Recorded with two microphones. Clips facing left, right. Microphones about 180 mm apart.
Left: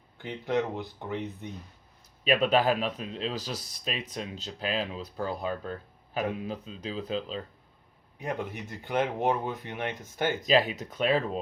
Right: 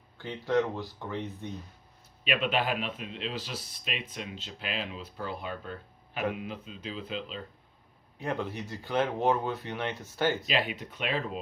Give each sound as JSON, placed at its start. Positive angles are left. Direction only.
{"t": 0.2, "sound": "speech", "side_deg": 20}
{"t": 2.2, "sound": "speech", "side_deg": 40}
{"t": 8.2, "sound": "speech", "side_deg": 15}
{"t": 10.4, "sound": "speech", "side_deg": 40}